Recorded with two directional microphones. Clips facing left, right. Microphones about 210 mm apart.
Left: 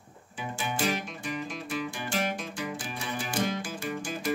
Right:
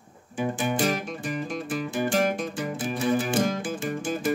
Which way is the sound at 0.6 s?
45° right (ahead or behind).